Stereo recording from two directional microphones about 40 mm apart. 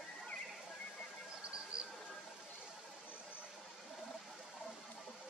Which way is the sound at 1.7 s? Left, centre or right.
Right.